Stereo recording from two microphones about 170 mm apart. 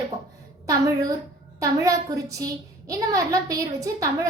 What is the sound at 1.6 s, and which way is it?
A woman's voice, 20° right (ahead or behind).